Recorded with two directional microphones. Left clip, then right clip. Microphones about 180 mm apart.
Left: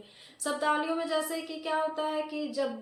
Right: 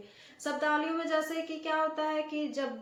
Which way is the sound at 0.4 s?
10° left (ahead or behind).